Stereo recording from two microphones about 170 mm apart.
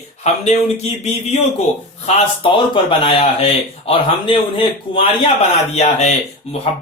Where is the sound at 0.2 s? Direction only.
40° left (ahead or behind).